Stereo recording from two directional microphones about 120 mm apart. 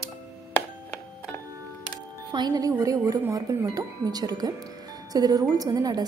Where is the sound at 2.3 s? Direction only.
35° right (ahead or behind).